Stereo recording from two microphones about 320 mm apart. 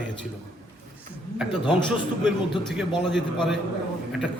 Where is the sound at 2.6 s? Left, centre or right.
Centre.